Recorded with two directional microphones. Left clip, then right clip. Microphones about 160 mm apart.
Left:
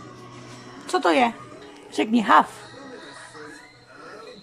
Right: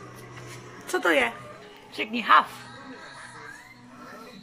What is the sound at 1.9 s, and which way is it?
Speech, 40° left (ahead or behind).